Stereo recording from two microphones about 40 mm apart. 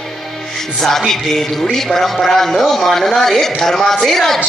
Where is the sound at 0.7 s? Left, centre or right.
Centre.